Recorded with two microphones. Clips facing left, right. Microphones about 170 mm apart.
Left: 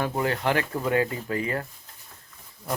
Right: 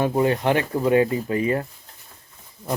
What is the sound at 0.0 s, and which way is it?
Speech, 20° right (ahead or behind).